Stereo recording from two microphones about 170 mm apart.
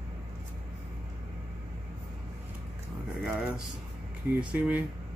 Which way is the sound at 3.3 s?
5° right (ahead or behind).